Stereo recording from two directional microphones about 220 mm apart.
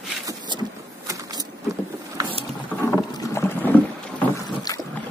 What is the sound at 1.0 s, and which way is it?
Printer, 15° right (ahead or behind).